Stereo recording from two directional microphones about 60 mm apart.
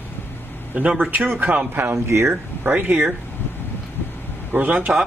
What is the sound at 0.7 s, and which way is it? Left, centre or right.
Speech, centre.